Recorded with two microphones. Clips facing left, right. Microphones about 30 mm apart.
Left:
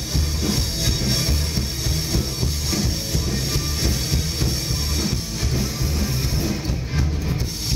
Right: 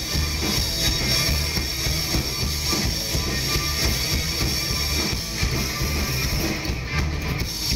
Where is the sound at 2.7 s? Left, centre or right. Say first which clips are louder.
Left 1 dB; centre.